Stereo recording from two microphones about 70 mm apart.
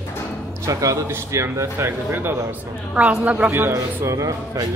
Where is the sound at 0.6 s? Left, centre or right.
Right.